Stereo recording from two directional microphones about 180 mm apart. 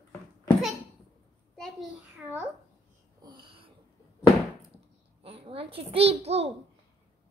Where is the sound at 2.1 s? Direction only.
10° right (ahead or behind).